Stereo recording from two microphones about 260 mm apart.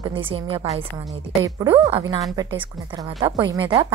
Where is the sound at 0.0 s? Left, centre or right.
Centre.